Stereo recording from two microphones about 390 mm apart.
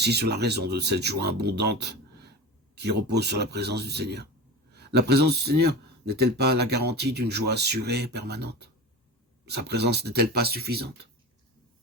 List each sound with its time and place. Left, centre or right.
0.0 s speech: right